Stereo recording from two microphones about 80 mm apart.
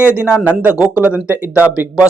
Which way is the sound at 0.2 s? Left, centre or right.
Left.